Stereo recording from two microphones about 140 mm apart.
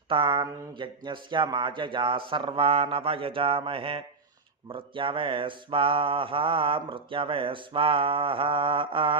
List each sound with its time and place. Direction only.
0.1 s mantra: 35° right (ahead or behind)